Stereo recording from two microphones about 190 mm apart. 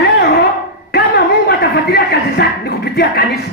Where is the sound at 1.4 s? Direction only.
55° left (ahead or behind).